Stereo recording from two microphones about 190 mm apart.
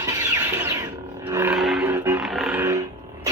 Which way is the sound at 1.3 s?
10° right (ahead or behind).